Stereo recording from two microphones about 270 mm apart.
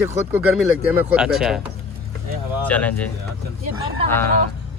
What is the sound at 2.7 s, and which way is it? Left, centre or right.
Speech, centre.